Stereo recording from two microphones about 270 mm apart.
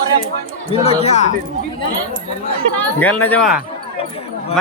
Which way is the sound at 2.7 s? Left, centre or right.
Centre.